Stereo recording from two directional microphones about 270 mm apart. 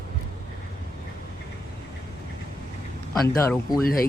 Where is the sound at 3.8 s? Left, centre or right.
Left.